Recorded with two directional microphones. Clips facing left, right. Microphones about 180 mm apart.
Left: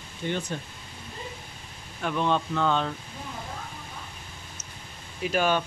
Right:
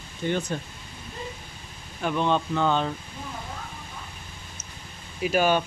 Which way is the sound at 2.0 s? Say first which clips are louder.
Right 2 dB; centre (ahead or behind).